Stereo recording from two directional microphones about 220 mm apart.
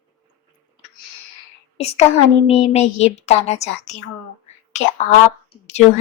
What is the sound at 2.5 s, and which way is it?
A woman's voice, 30° left (ahead or behind).